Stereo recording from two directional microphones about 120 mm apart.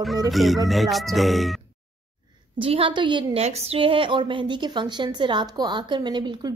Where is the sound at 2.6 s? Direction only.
50° right (ahead or behind).